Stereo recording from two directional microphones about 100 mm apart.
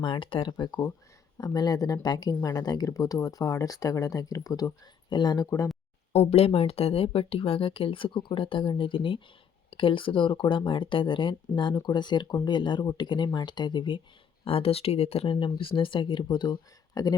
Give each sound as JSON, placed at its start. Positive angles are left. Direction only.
{"t": 0.0, "sound": "speech", "side_deg": 55}
{"t": 0.5, "sound": "speech", "side_deg": 50}
{"t": 6.1, "sound": "speech", "side_deg": 90}
{"t": 14.4, "sound": "speech", "side_deg": 70}